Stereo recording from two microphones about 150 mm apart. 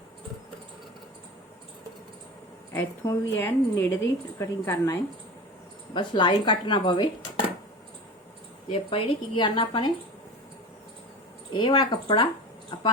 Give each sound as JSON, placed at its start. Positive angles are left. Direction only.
{"t": 2.7, "sound": "a woman's voice", "side_deg": 20}
{"t": 5.9, "sound": "speech", "side_deg": 30}
{"t": 8.7, "sound": "speech", "side_deg": 40}
{"t": 11.5, "sound": "speech", "side_deg": 30}